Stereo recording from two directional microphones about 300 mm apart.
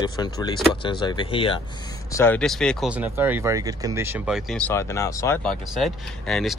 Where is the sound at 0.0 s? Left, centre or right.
Centre.